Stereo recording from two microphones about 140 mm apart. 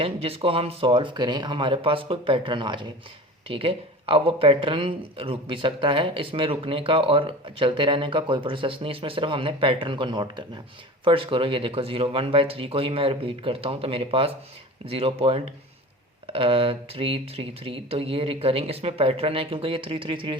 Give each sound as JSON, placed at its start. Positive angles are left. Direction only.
{"t": 0.0, "sound": "speech", "side_deg": -40}